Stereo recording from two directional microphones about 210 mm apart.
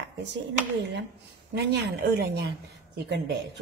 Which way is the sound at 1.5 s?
50° right (ahead or behind).